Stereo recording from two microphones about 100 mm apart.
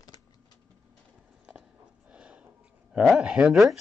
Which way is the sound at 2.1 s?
10° right (ahead or behind).